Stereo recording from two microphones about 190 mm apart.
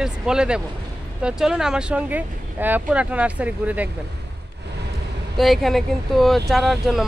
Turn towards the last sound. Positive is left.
turn(degrees=0)  # may be behind; listen again after turning